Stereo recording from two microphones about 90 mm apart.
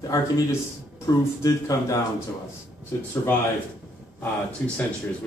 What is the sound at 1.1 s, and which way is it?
Speech, 40° left (ahead or behind).